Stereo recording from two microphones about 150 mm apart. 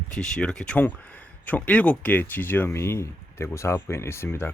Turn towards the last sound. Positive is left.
turn(degrees=15)  # may be behind; listen again after turning